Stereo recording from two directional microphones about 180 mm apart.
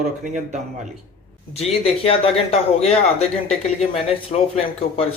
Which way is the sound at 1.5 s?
35° left (ahead or behind).